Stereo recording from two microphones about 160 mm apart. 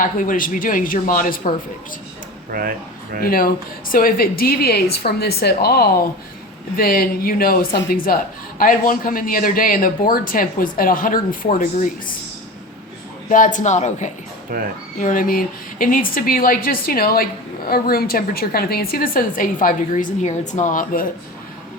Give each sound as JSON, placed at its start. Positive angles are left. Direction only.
{"t": 0.0, "sound": "speech", "side_deg": 55}
{"t": 2.5, "sound": "speech", "side_deg": -65}
{"t": 3.2, "sound": "a woman's voice", "side_deg": 65}
{"t": 6.7, "sound": "speech", "side_deg": 65}
{"t": 13.2, "sound": "speech", "side_deg": 55}
{"t": 14.5, "sound": "speech", "side_deg": -60}
{"t": 14.9, "sound": "speech", "side_deg": 55}